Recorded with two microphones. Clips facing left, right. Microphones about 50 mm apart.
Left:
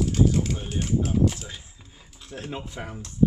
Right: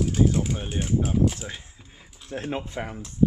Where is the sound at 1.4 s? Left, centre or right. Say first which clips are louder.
Right 3 dB; right.